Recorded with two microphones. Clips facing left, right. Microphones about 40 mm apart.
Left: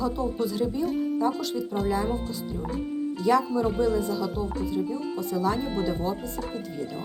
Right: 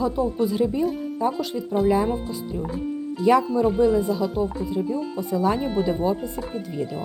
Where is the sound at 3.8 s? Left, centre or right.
Centre.